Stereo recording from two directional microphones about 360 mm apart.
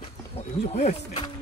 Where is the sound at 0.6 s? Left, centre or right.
Centre.